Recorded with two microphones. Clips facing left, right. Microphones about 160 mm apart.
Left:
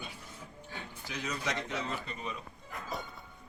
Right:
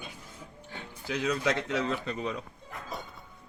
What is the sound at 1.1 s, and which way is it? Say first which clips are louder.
Speech: right 8 dB; 70° right (ahead or behind).